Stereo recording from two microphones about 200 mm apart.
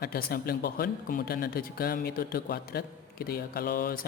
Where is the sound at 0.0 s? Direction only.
50° left (ahead or behind).